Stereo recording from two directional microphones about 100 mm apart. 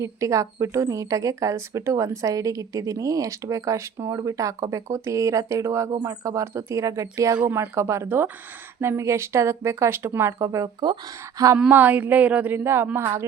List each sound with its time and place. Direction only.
0.0 s a woman's voice: 30° right (ahead or behind)
11.7 s a woman's voice: 15° right (ahead or behind)